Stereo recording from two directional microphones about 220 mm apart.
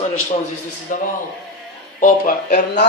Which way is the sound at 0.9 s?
35° left (ahead or behind).